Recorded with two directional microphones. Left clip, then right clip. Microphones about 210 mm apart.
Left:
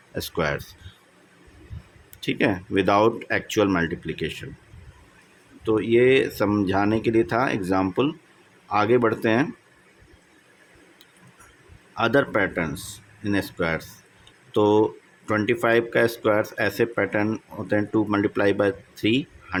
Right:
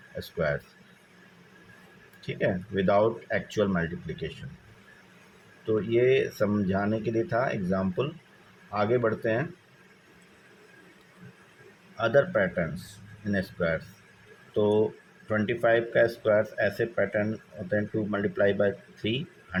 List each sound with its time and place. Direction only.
0.2 s speech: 45° left (ahead or behind)
2.2 s speech: 45° left (ahead or behind)
5.6 s speech: 40° left (ahead or behind)
11.9 s speech: 45° left (ahead or behind)